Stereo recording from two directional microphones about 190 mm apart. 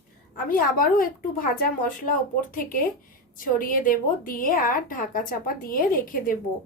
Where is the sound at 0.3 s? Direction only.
50° left (ahead or behind).